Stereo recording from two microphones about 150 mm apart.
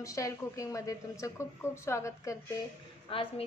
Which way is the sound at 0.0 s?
20° left (ahead or behind).